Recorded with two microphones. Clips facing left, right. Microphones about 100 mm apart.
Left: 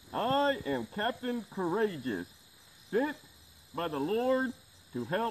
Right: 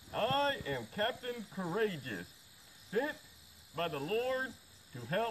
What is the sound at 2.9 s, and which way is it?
Speech, 35° left (ahead or behind).